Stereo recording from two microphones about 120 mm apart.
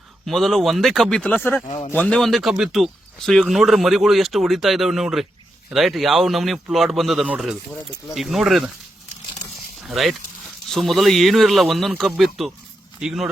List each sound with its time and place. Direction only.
0.3 s speech: centre (ahead or behind); by 1.6 s 15° left (ahead or behind)
1.6 s speech: 45° left (ahead or behind)
1.9 s speech: 10° left (ahead or behind)
9.8 s speech: centre (ahead or behind)